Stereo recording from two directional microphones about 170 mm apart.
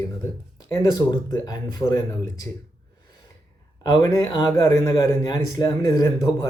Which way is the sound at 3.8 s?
20° left (ahead or behind).